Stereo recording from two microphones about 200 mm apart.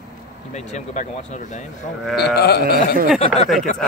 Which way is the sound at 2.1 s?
55° left (ahead or behind).